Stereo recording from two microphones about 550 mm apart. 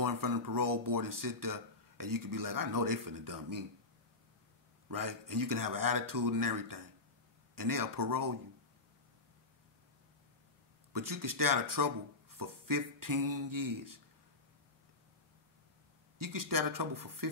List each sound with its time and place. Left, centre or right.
0.0 s speech: right
4.8 s speech: right
10.9 s speech: right
16.2 s speech: right